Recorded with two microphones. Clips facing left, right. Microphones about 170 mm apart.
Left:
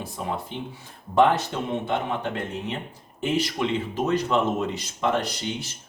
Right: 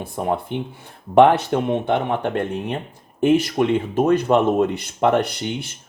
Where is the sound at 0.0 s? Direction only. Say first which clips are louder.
Right 7 dB; 55° right (ahead or behind).